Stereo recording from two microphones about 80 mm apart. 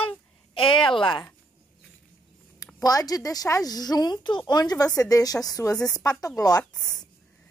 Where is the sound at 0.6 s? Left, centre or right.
Left.